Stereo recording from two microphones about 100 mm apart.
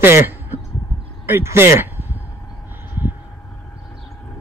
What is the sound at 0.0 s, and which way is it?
Speech, 20° right (ahead or behind).